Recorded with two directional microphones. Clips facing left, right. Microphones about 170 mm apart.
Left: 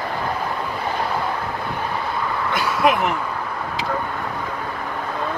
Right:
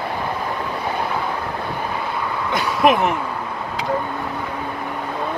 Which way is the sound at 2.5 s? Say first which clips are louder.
Right 3 dB; 20° right (ahead or behind).